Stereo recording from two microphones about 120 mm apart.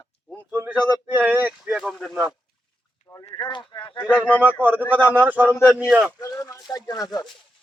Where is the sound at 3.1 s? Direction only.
20° left (ahead or behind).